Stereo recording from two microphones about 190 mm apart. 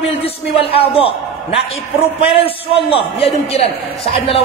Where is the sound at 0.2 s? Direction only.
30° left (ahead or behind).